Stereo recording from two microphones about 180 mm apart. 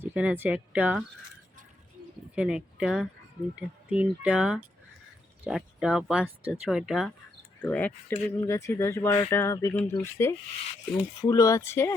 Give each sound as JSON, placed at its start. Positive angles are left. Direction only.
{"t": 0.0, "sound": "speech", "side_deg": -10}
{"t": 2.3, "sound": "speech", "side_deg": -5}